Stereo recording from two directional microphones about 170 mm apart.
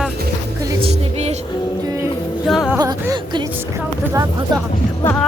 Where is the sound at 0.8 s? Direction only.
40° right (ahead or behind).